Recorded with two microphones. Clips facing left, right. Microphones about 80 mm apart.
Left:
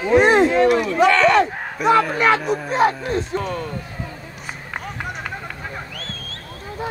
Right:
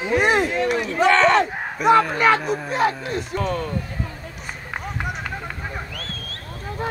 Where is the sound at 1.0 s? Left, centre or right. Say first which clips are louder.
Even; right.